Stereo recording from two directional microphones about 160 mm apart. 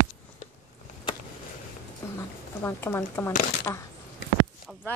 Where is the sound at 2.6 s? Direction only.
15° left (ahead or behind).